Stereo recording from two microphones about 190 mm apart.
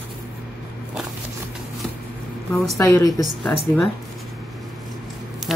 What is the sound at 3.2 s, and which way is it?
Speech, centre (ahead or behind).